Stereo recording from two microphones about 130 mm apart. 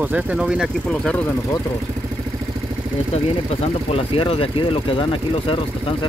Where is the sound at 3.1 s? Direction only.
50° left (ahead or behind).